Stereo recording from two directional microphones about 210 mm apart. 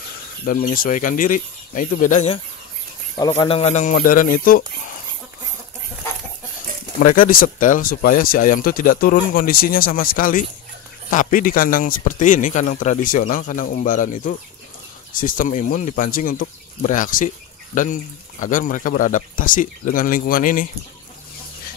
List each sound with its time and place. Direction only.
0.5 s a man's voice: 40° left (ahead or behind)
3.2 s a man's voice: 20° left (ahead or behind); by 4.6 s 45° left (ahead or behind)
7.2 s a man's voice: 40° left (ahead or behind)